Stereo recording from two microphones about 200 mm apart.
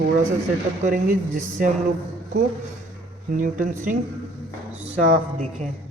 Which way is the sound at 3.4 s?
40° right (ahead or behind).